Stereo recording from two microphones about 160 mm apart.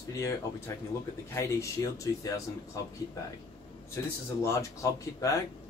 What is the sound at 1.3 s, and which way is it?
Speech, 20° left (ahead or behind).